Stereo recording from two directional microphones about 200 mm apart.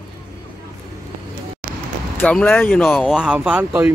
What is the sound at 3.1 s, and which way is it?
Speech, 5° right (ahead or behind).